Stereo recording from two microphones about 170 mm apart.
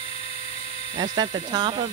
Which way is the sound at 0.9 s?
25° right (ahead or behind).